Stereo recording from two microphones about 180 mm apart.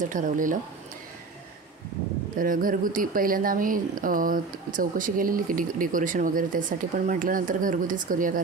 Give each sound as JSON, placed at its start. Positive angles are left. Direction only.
{"t": 0.0, "sound": "speech", "side_deg": -45}
{"t": 2.3, "sound": "speech", "side_deg": -50}